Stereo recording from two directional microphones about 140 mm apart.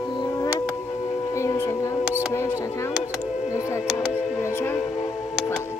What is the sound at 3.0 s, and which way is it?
Music, 50° left (ahead or behind).